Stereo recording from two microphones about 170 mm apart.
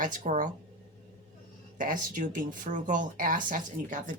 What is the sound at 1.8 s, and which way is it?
Speech, 55° right (ahead or behind).